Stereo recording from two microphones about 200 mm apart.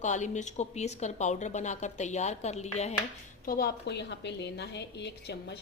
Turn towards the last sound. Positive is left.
turn(degrees=55)  # may be behind; listen again after turning